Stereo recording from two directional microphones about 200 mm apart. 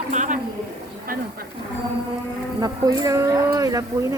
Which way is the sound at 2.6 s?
20° right (ahead or behind).